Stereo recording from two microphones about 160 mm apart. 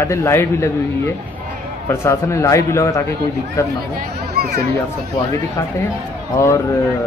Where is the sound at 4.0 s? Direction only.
70° right (ahead or behind).